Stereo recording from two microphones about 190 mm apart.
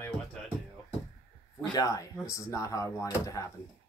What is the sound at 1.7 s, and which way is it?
Speech, 20° left (ahead or behind).